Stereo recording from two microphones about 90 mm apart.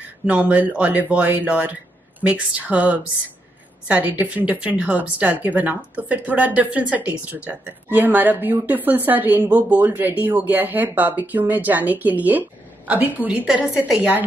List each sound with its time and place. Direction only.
0.3 s a woman's voice: 15° right (ahead or behind)